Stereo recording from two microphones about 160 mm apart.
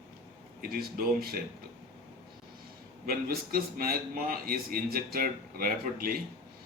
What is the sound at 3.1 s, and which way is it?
A man's voice, 65° right (ahead or behind).